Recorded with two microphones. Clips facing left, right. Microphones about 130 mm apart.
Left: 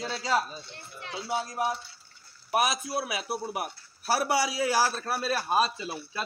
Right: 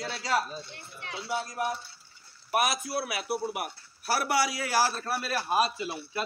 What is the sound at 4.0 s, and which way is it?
A man's voice, 20° left (ahead or behind).